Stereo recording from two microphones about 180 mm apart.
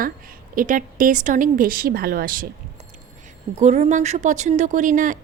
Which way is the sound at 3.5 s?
40° right (ahead or behind).